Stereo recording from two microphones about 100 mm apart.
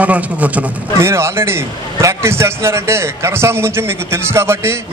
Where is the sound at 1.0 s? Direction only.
25° right (ahead or behind).